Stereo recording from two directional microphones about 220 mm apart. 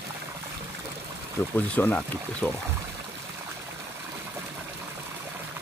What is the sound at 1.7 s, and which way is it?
Speech, 5° left (ahead or behind).